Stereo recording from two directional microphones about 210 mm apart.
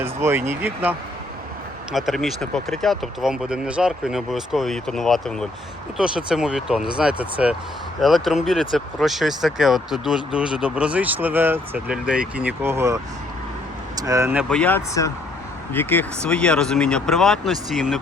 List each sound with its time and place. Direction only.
0.0 s speech: 10° right (ahead or behind)
14.5 s speech: 5° left (ahead or behind)